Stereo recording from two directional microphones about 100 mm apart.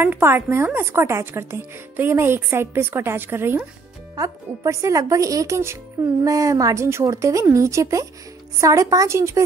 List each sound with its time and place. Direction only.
0.0 s speech: 25° right (ahead or behind)
4.1 s a woman's voice: 35° right (ahead or behind)